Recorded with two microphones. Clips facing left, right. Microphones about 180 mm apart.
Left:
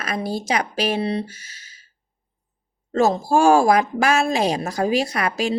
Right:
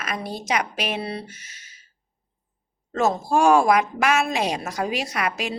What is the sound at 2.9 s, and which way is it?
A woman's voice, 30° left (ahead or behind).